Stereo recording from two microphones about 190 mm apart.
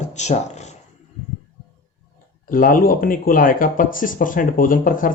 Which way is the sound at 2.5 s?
45° left (ahead or behind).